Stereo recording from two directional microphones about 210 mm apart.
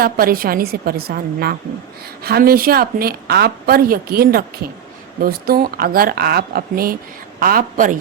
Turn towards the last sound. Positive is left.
turn(degrees=-40)  # may be behind; listen again after turning